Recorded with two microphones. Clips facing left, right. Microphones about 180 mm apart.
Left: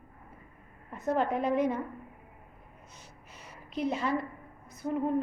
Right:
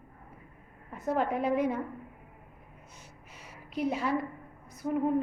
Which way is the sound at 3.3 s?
10° right (ahead or behind).